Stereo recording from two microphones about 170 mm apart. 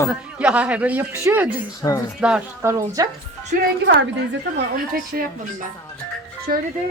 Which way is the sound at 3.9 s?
85° right.